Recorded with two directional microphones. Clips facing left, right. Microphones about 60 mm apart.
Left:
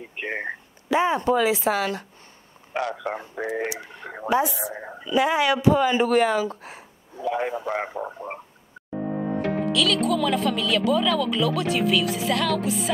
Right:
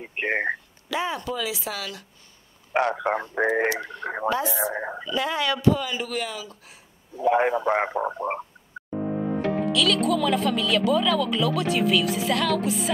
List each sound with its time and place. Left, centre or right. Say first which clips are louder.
0.0 s speech: right 5 dB; right
0.8 s a sound: left 7 dB; left
1.3 s speech: left 9 dB; left
2.7 s speech: right 5 dB; right
3.7 s speech: right 6 dB; centre
4.6 s speech: right 5 dB; right
5.0 s speech: left 6 dB; centre
5.8 s speech: left 10 dB; left
7.2 s speech: right 5 dB; right
9.7 s speech: even; centre